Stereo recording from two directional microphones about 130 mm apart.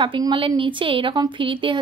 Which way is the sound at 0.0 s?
40° right (ahead or behind).